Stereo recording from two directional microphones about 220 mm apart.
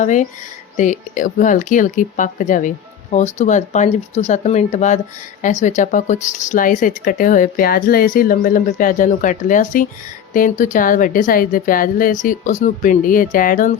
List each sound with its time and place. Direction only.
0.0 s speech: 35° left (ahead or behind)